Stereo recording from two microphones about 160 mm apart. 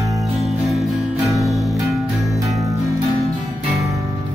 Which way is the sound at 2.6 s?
20° right (ahead or behind).